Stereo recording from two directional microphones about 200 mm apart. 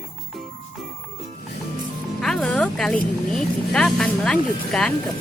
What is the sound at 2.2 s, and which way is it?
Music, centre (ahead or behind).